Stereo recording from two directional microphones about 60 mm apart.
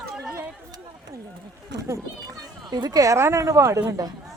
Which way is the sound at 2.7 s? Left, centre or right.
Right.